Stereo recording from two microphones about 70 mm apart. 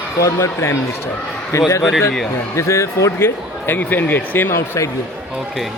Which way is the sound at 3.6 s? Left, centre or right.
Left.